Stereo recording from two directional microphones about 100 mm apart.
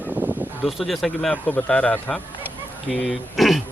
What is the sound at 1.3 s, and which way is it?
Speech, 15° left (ahead or behind).